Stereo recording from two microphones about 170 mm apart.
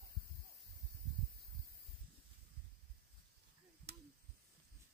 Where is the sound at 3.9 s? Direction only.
75° right (ahead or behind).